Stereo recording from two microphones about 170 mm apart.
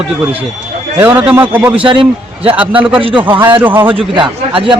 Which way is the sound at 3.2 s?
10° right (ahead or behind).